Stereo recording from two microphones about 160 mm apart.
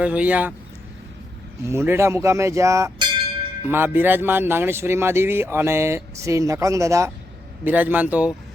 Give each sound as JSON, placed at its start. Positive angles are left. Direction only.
{"t": 0.0, "sound": "speech", "side_deg": -10}
{"t": 1.6, "sound": "speech", "side_deg": -15}
{"t": 3.7, "sound": "speech", "side_deg": -15}